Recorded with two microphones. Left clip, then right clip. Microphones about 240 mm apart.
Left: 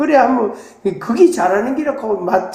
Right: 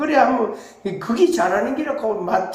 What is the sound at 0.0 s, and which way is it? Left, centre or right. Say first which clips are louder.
A woman's voice: left 4 dB; left.